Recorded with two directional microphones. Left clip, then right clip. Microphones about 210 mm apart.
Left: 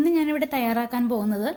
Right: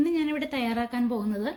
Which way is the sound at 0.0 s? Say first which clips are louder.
Left 4 dB; 45° left (ahead or behind).